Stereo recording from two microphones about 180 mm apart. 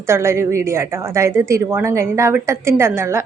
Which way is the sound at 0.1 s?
15° right (ahead or behind).